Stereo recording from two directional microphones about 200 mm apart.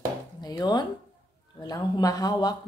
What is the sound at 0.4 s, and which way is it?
A woman's voice, 20° left (ahead or behind).